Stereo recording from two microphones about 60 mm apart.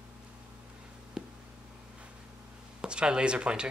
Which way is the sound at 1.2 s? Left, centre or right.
Centre.